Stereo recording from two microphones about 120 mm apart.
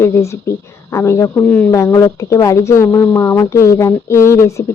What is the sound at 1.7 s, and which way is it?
Speech, 30° left (ahead or behind).